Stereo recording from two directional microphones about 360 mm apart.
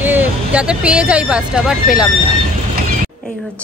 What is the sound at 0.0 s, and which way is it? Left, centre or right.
Speech, centre.